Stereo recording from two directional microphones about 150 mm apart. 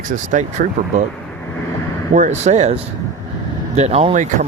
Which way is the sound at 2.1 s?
55° right (ahead or behind).